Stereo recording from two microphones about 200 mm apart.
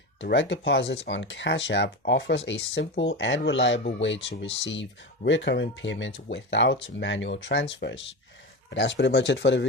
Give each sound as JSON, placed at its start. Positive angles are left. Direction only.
{"t": 0.2, "sound": "speech", "side_deg": 65}